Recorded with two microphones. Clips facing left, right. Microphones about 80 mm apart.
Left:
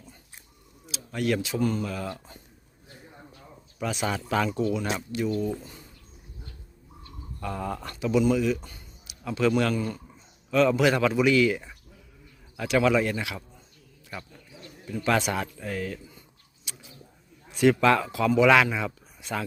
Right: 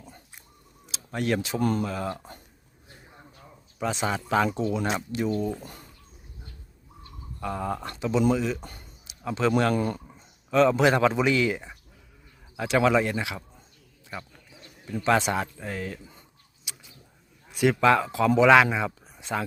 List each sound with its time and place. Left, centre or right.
0.9 s speech: right
1.8 s speech: right
3.8 s speech: right
7.3 s speech: right
8.6 s speech: right
9.0 s a sound: right
9.5 s a man's voice: right
9.7 s a man's voice: right
10.5 s a man's voice: right
16.7 s a sound: centre
17.5 s speech: centre